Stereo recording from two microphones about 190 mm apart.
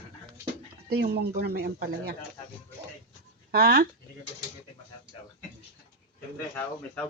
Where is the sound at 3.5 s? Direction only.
55° right (ahead or behind).